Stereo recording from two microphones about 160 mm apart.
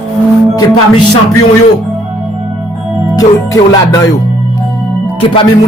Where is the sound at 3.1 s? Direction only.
20° left (ahead or behind).